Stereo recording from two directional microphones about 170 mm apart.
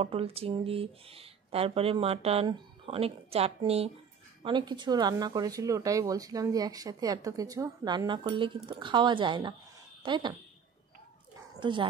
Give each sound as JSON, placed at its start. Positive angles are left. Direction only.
{"t": 0.0, "sound": "speech", "side_deg": -35}